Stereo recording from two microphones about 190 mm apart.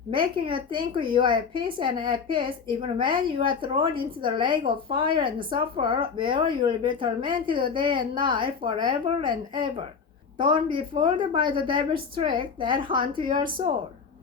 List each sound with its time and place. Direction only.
0.2 s speech: 25° right (ahead or behind)